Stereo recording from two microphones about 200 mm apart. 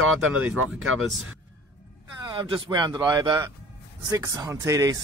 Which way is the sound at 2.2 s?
20° right (ahead or behind).